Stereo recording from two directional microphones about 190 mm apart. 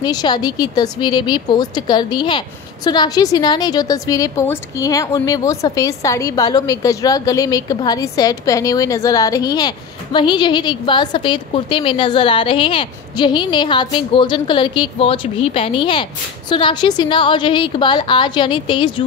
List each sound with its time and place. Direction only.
0.0 s a woman's voice: 20° left (ahead or behind)